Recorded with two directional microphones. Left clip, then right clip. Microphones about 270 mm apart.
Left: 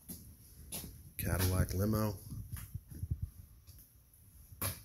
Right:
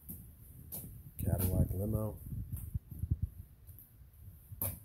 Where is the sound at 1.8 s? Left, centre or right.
Centre.